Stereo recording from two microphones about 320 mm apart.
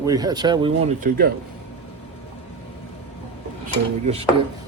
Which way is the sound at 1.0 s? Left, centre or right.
Right.